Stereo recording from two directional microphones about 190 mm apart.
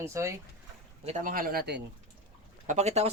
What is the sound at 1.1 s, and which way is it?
Speech, 45° right (ahead or behind).